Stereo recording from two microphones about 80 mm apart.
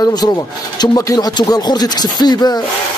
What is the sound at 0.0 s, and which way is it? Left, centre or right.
Speech, left.